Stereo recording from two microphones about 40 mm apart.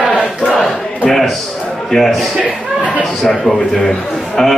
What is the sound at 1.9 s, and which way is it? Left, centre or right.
Speech, centre.